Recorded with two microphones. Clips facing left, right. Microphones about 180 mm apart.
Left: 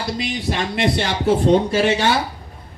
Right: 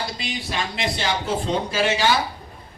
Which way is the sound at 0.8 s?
60° left (ahead or behind).